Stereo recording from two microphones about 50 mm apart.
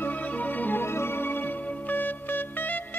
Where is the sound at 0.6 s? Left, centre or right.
Left.